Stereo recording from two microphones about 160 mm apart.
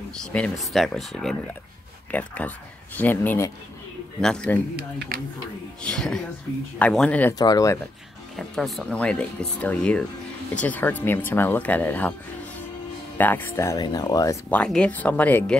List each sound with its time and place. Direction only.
0.2 s speech: 5° left (ahead or behind)
5.8 s speech: 5° left (ahead or behind)
7.3 s speech: 25° left (ahead or behind)
8.4 s speech: centre (ahead or behind)
13.2 s speech: 10° left (ahead or behind)
14.5 s speech: 5° left (ahead or behind)